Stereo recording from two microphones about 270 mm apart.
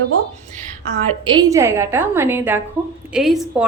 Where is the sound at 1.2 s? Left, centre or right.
Centre.